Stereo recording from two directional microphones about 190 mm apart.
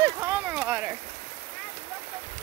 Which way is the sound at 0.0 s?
10° right (ahead or behind).